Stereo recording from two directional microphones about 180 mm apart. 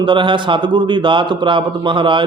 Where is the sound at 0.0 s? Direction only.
25° right (ahead or behind).